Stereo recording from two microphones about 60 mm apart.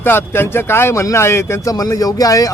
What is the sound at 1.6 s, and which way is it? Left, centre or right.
Speech, left.